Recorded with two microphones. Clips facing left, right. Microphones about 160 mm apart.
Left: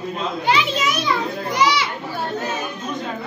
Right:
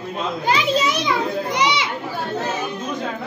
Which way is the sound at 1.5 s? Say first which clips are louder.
Left 4 dB; 20° right (ahead or behind).